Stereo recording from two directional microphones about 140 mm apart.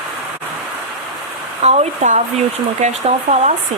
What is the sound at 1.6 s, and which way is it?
Speech, 55° right (ahead or behind).